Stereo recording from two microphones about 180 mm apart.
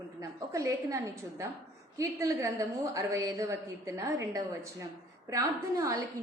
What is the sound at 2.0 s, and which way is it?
A woman's voice, 15° right (ahead or behind).